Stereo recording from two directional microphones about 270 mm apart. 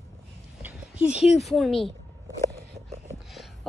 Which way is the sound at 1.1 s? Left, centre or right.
Left.